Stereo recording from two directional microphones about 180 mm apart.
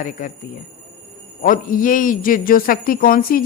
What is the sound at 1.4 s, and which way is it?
Speech, 50° left (ahead or behind).